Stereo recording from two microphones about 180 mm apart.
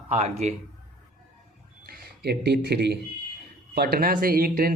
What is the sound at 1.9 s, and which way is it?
Speech, 65° right (ahead or behind).